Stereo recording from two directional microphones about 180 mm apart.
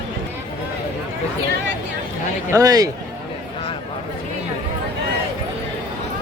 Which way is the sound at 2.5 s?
20° right (ahead or behind).